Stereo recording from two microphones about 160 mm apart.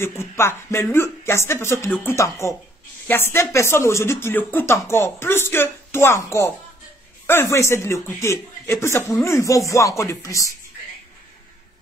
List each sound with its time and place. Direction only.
0.0 s speech: 15° left (ahead or behind)